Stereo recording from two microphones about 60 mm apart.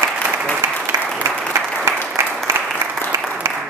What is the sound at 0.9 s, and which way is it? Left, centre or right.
Applause, right.